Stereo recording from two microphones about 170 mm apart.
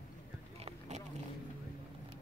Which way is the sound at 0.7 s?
40° right (ahead or behind).